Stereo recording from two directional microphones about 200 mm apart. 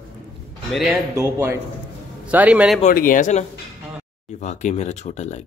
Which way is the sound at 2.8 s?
45° left (ahead or behind).